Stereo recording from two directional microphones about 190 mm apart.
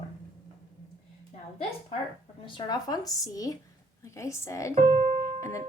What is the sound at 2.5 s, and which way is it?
Speech, 25° left (ahead or behind).